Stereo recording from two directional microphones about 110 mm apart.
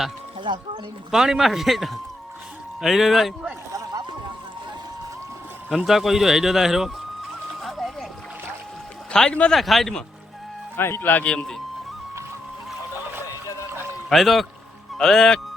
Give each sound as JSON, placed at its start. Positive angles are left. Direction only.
{"t": 0.4, "sound": "speech", "side_deg": -50}
{"t": 1.1, "sound": "speech", "side_deg": -5}
{"t": 3.7, "sound": "boat", "side_deg": -30}
{"t": 5.7, "sound": "speech", "side_deg": 0}
{"t": 7.6, "sound": "splash", "side_deg": 0}
{"t": 9.1, "sound": "speech", "side_deg": 10}
{"t": 10.8, "sound": "speech", "side_deg": 20}
{"t": 14.1, "sound": "speech", "side_deg": 0}